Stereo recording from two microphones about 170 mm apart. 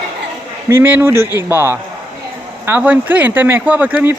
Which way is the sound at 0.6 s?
15° right (ahead or behind).